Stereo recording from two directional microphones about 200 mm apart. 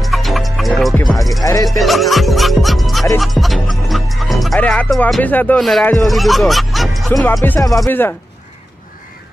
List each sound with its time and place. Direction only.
0.0 s music: centre (ahead or behind)
1.4 s music: 15° left (ahead or behind)
1.7 s music: centre (ahead or behind)
3.2 s speech: centre (ahead or behind)